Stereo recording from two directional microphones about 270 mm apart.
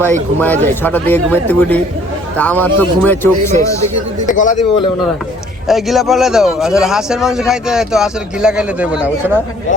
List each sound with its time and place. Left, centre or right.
0.0 s a man's voice: centre
4.3 s a man's voice: left
5.6 s a man's voice: centre